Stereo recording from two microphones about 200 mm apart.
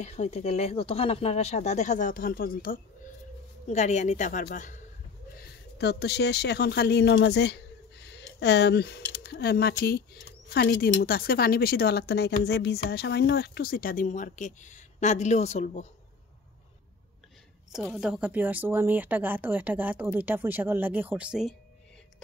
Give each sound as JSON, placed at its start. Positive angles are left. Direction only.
{"t": 0.0, "sound": "speech", "side_deg": 35}
{"t": 3.6, "sound": "speech", "side_deg": 35}
{"t": 5.4, "sound": "speech", "side_deg": 55}
{"t": 17.7, "sound": "speech", "side_deg": -5}